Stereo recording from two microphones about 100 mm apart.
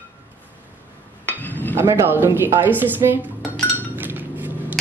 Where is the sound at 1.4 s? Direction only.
20° left (ahead or behind).